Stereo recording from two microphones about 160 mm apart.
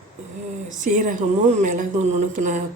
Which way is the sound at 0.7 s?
55° right (ahead or behind).